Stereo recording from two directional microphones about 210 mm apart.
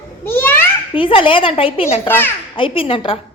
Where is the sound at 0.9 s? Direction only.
25° left (ahead or behind).